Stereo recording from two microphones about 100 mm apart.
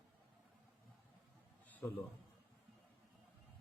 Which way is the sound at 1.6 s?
15° left (ahead or behind).